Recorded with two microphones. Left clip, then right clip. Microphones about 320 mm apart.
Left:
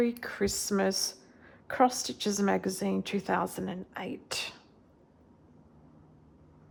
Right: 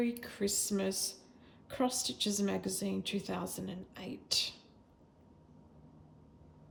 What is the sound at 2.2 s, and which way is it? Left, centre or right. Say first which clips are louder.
A woman's voice: left 8 dB; centre.